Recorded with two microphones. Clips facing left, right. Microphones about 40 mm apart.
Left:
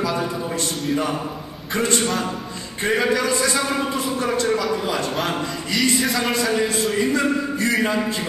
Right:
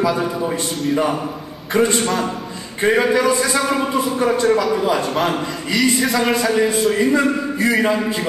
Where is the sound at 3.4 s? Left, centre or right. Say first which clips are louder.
Right 3 dB; centre.